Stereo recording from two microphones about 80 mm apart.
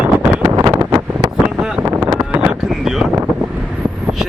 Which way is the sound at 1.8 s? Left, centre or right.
Right.